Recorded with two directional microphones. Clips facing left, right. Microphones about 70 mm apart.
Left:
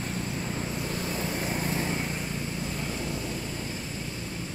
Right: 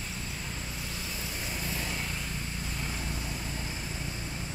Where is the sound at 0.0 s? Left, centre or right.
Left; by 3.3 s centre.